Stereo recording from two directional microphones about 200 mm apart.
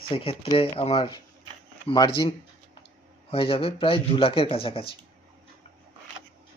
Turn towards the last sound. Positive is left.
turn(degrees=25)  # may be behind; listen again after turning